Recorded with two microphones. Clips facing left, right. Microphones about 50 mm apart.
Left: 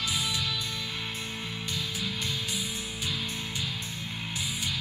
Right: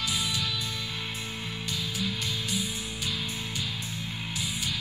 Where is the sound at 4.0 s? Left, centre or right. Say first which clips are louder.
Right 1 dB; centre.